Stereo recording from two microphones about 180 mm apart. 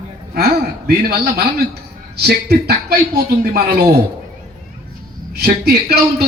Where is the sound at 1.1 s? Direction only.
60° right (ahead or behind).